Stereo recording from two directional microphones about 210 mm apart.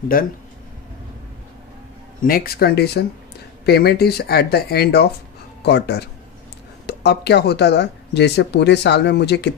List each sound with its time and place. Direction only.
0.1 s speech: 45° left (ahead or behind)
2.2 s speech: 45° left (ahead or behind)